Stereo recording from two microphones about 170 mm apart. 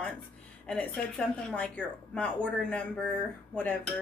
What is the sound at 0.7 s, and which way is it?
A woman's voice, 5° left (ahead or behind).